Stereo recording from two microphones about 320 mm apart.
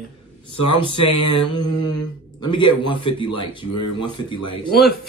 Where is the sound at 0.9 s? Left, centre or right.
Left.